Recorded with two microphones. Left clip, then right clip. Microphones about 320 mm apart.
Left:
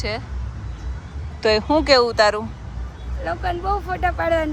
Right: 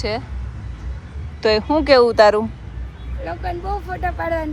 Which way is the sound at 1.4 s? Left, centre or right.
Centre.